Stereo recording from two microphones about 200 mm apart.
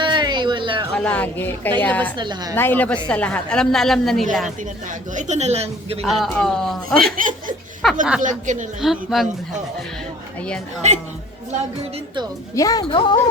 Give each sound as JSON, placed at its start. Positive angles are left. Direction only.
{"t": 0.0, "sound": "a sound", "side_deg": -20}
{"t": 0.9, "sound": "speech", "side_deg": 5}
{"t": 2.1, "sound": "a woman's voice", "side_deg": -20}
{"t": 2.6, "sound": "speech", "side_deg": 10}
{"t": 5.1, "sound": "a woman's voice", "side_deg": -35}
{"t": 6.1, "sound": "speech", "side_deg": 0}
{"t": 7.2, "sound": "a woman's voice", "side_deg": -40}
{"t": 7.8, "sound": "speech", "side_deg": 0}
{"t": 8.2, "sound": "a woman's voice", "side_deg": -40}
{"t": 8.8, "sound": "speech", "side_deg": 0}
{"t": 10.8, "sound": "a woman's voice", "side_deg": -35}
{"t": 12.5, "sound": "a woman's voice", "side_deg": 20}